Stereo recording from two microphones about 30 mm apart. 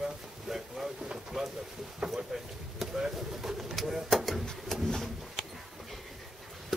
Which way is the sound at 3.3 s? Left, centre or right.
Centre.